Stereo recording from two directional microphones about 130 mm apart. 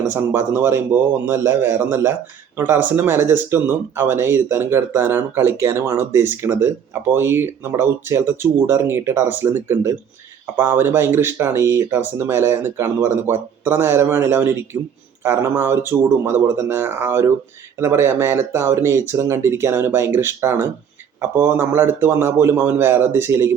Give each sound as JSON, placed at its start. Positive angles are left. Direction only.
{"t": 0.1, "sound": "speech", "side_deg": -15}